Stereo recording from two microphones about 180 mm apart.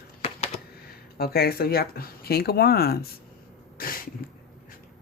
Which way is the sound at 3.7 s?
55° left (ahead or behind).